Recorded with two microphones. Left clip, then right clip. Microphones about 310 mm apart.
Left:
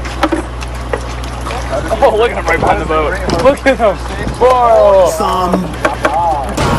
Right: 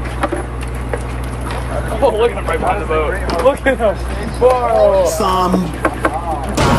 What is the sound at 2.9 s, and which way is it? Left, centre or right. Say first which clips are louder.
Speech: left 3 dB; left.